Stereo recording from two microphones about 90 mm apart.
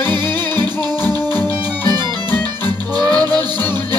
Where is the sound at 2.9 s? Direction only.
50° right (ahead or behind).